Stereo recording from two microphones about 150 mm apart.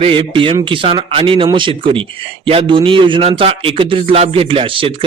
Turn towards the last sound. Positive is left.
turn(degrees=-35)  # may be behind; listen again after turning